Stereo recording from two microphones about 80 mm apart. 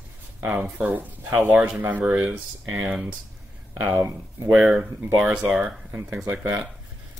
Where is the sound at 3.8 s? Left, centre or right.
Right.